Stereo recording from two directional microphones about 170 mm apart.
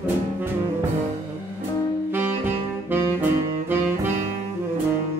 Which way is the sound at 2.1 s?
10° right (ahead or behind).